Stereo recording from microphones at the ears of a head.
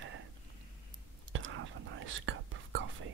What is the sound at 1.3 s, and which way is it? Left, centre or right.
Whispering, right.